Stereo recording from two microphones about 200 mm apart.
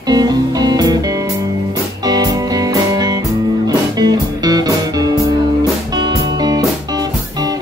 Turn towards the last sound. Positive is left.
turn(degrees=-20)  # may be behind; listen again after turning